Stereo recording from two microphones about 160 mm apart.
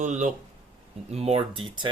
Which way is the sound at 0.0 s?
50° right (ahead or behind).